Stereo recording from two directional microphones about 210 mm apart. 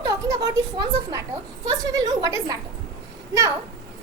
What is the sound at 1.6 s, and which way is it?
Speech, 15° right (ahead or behind).